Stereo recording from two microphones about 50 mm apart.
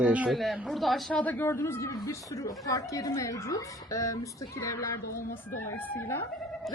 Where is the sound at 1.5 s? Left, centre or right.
Left.